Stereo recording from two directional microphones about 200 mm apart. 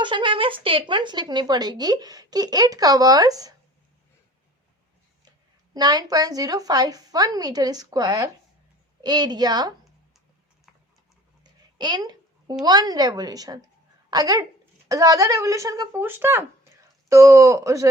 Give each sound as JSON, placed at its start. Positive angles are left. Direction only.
{"t": 0.0, "sound": "speech", "side_deg": -25}
{"t": 5.7, "sound": "speech", "side_deg": -20}
{"t": 11.8, "sound": "a sound", "side_deg": -20}
{"t": 12.6, "sound": "speech", "side_deg": -20}